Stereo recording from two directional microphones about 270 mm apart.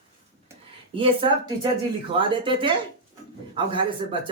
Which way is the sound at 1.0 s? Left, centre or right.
Centre.